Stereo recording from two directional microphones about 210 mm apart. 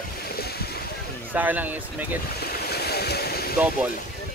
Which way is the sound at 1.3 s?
10° right (ahead or behind).